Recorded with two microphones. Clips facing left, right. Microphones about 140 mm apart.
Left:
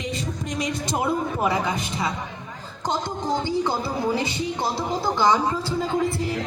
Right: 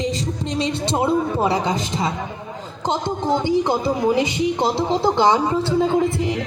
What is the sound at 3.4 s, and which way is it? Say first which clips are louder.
A woman's voice: right 6 dB; 20° right (ahead or behind).